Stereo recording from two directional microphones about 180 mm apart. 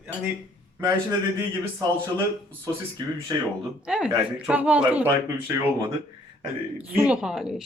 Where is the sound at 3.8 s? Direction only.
5° right (ahead or behind).